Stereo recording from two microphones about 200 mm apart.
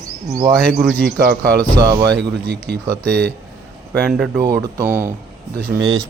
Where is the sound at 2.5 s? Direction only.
55° right (ahead or behind).